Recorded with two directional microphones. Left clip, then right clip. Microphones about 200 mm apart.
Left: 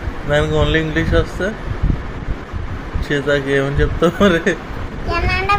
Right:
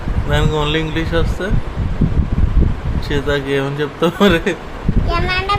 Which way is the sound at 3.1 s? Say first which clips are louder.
Left 2 dB; 15° right (ahead or behind).